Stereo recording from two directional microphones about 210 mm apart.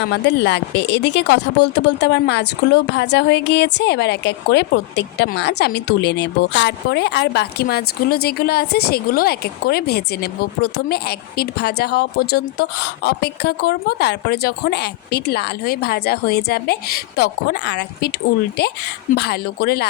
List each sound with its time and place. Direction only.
0.0 s speech: 55° left (ahead or behind)
19.1 s speech: 50° left (ahead or behind)